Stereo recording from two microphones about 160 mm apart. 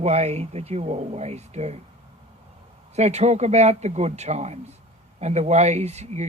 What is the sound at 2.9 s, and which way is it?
Speech, 45° right (ahead or behind).